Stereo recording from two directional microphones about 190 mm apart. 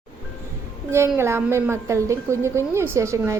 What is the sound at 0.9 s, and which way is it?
A woman's voice, 15° right (ahead or behind).